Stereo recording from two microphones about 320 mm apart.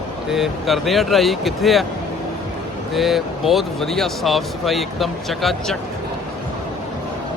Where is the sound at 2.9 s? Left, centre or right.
Centre.